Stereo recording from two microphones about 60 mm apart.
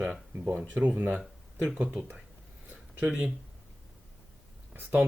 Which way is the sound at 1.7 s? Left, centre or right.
Centre.